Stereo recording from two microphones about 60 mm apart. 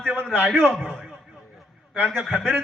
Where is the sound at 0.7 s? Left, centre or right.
Centre.